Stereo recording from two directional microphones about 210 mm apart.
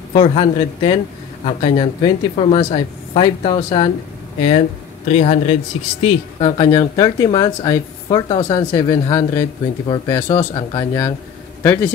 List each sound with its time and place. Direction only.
0.1 s a man's voice: 30° left (ahead or behind)